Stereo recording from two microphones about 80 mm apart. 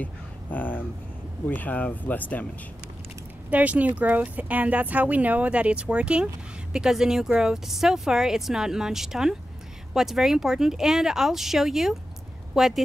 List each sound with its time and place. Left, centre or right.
0.0 s speech: left
3.4 s speech: centre